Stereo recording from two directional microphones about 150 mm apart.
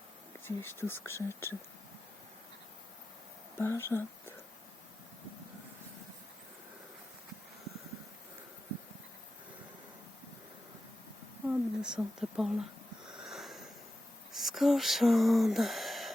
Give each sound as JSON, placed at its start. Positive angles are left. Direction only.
{"t": 0.4, "sound": "speech", "side_deg": 15}
{"t": 3.6, "sound": "speech", "side_deg": 15}
{"t": 11.4, "sound": "a woman's voice", "side_deg": -5}
{"t": 13.1, "sound": "wheeze", "side_deg": 0}
{"t": 14.3, "sound": "a sound", "side_deg": 0}